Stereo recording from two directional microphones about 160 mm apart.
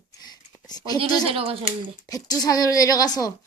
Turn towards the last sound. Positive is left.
turn(degrees=20)  # may be behind; listen again after turning